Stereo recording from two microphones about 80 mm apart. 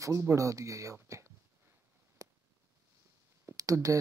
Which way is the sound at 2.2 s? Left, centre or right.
Right.